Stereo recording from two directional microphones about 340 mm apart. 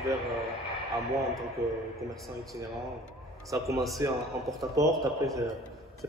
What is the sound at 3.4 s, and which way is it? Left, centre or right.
A man's voice, centre.